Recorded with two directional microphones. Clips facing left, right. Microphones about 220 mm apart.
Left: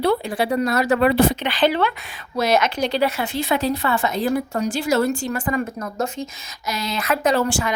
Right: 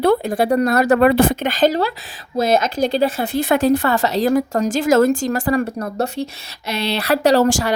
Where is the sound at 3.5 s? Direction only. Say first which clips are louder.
Right 6 dB; 45° right (ahead or behind).